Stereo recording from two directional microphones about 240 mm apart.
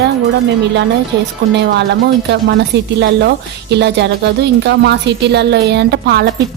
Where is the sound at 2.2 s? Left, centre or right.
Right.